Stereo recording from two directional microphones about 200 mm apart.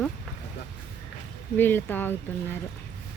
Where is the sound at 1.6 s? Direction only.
10° left (ahead or behind).